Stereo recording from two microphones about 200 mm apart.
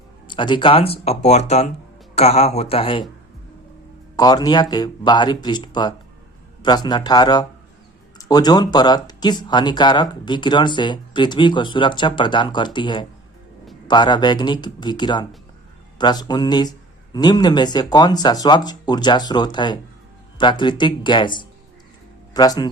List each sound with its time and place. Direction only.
0.3 s speech: 25° left (ahead or behind)
4.2 s speech: 20° left (ahead or behind)